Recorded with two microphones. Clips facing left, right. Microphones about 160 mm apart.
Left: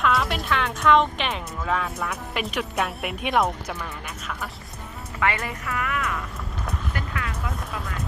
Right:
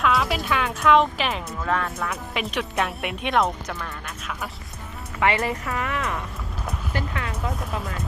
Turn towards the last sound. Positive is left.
turn(degrees=-30)  # may be behind; listen again after turning